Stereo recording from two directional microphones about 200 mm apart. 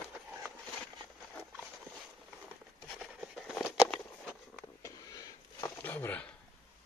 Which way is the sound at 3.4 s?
Centre (ahead or behind).